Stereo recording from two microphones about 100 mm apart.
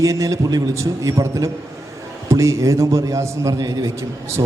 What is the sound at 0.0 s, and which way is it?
A man's voice, 30° right (ahead or behind).